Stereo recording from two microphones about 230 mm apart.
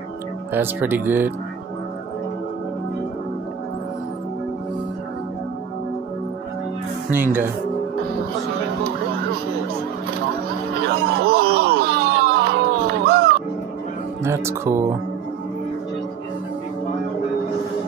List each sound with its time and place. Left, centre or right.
0.5 s speech: centre
10.9 s wail: right
14.2 s speech: centre